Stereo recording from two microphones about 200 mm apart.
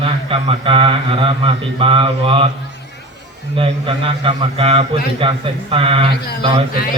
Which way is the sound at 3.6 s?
25° right (ahead or behind).